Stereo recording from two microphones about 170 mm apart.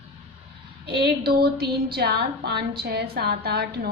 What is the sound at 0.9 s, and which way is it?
A woman's voice, 65° right (ahead or behind).